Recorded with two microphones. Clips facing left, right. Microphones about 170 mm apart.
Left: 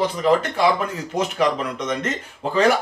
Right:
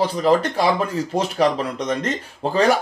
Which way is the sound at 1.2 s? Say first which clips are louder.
Right 1 dB; 35° right (ahead or behind).